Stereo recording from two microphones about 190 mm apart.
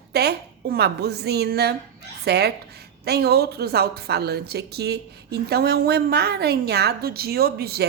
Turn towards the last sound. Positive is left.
turn(degrees=-55)  # may be behind; listen again after turning